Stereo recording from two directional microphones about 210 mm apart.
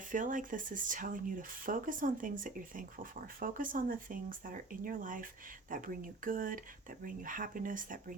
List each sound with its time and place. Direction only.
0.1 s speech: 40° right (ahead or behind)